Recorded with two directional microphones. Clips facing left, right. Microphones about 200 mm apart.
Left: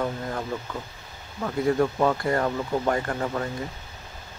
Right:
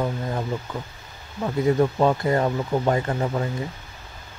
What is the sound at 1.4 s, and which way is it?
Speech, 20° right (ahead or behind).